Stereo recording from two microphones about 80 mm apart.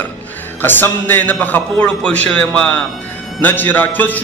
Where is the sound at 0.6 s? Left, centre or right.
Left.